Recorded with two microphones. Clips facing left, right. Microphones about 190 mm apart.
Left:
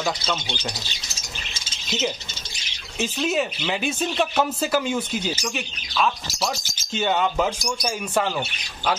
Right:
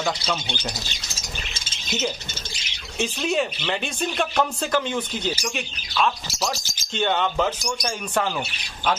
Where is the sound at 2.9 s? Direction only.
Centre (ahead or behind).